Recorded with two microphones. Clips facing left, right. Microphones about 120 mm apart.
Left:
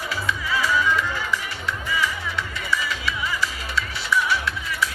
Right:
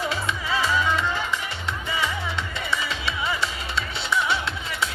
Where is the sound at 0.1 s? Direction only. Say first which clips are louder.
Even; 25° right (ahead or behind).